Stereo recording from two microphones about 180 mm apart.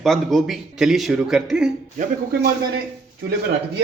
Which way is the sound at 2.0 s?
50° right (ahead or behind).